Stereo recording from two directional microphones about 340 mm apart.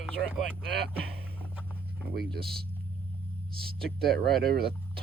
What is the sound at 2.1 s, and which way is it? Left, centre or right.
Speech, right.